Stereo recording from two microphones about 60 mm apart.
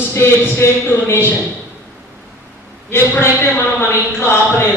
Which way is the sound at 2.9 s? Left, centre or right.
Left.